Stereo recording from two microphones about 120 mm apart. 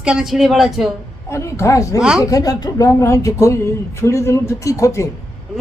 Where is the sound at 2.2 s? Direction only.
30° left (ahead or behind).